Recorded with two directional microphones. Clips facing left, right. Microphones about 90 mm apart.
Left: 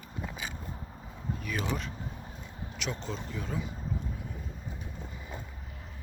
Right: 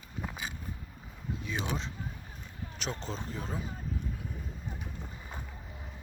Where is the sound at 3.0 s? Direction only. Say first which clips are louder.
Left 1 dB; 35° right (ahead or behind).